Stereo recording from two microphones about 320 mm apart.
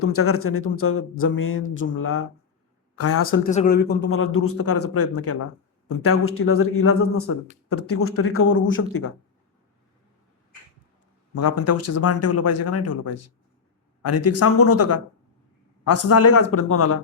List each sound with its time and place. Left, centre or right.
0.0 s speech: left
3.4 s speech: left
11.3 s speech: left